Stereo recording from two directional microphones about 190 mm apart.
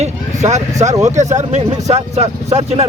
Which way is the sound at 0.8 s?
40° right (ahead or behind).